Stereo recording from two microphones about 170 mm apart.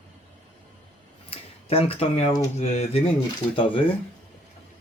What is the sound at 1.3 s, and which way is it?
A man's voice, 35° left (ahead or behind).